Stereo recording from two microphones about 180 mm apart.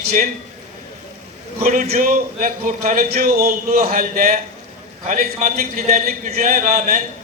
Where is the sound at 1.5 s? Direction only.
40° right (ahead or behind).